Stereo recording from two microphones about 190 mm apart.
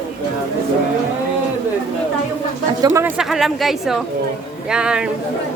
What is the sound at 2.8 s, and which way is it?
Speech, 15° right (ahead or behind).